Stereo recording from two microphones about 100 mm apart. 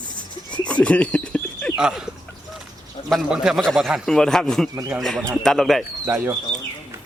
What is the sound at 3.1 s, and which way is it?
A man's voice, 5° right (ahead or behind).